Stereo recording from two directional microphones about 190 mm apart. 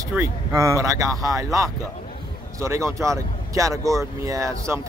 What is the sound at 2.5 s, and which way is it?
Speech, 15° right (ahead or behind).